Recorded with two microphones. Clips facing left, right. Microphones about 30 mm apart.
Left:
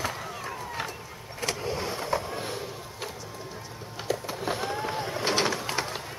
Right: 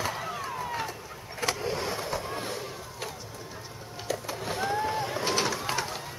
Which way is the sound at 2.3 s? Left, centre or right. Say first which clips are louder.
Even; centre.